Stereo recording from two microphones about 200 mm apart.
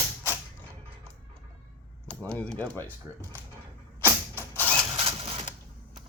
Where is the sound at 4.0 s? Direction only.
10° left (ahead or behind).